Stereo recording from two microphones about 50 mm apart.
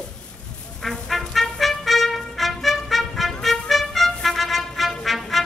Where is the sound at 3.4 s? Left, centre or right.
Centre.